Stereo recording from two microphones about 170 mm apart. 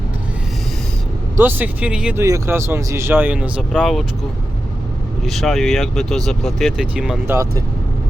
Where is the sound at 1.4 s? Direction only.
10° right (ahead or behind).